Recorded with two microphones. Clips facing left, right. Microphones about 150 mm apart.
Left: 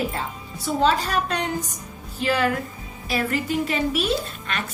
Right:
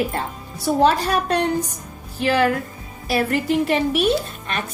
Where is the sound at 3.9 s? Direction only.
60° right (ahead or behind).